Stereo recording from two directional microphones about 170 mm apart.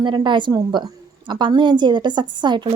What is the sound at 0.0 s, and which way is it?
Speech, 25° right (ahead or behind).